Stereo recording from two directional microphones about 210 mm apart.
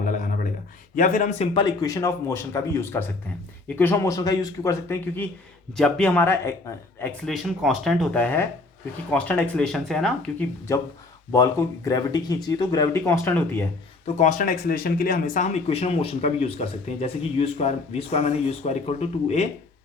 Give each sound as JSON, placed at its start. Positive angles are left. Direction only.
{"t": 0.0, "sound": "a sound", "side_deg": 40}
{"t": 0.9, "sound": "speech", "side_deg": 40}
{"t": 7.3, "sound": "speech", "side_deg": 0}
{"t": 11.9, "sound": "speech", "side_deg": 15}
{"t": 14.2, "sound": "speech", "side_deg": 35}